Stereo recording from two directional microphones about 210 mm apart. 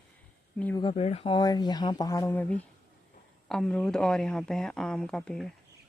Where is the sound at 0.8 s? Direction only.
30° left (ahead or behind); by 5.5 s 5° left (ahead or behind).